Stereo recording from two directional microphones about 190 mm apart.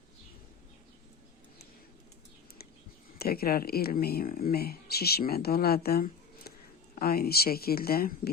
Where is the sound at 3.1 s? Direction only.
55° left (ahead or behind).